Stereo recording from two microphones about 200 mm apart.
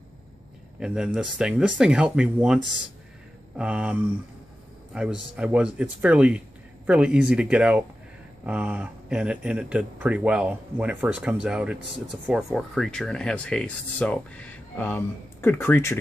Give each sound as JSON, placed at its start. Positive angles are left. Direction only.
{"t": 0.7, "sound": "speech", "side_deg": -5}